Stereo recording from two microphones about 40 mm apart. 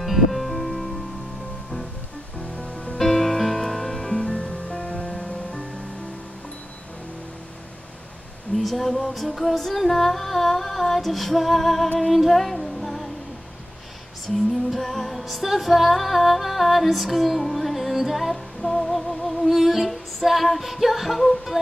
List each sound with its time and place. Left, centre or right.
0.0 s music: centre
2.4 s music: left
3.0 s music: centre
8.5 s music: centre
14.3 s music: centre